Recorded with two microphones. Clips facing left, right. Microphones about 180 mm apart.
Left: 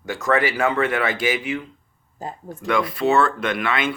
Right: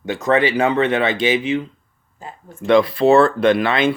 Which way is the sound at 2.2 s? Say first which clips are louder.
Left 5 dB; 40° left (ahead or behind).